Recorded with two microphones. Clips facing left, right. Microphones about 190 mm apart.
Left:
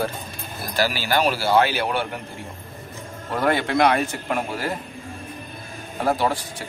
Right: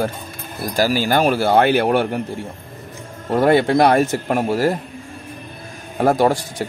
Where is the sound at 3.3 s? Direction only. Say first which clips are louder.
Right 7 dB; 30° right (ahead or behind).